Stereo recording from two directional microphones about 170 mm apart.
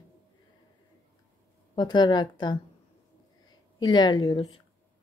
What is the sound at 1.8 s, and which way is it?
Speech, 25° left (ahead or behind).